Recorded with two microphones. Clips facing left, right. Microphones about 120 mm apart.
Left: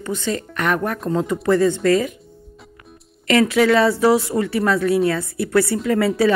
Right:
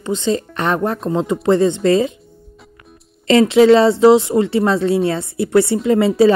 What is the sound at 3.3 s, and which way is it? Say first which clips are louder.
A woman's voice: right 6 dB; 25° right (ahead or behind).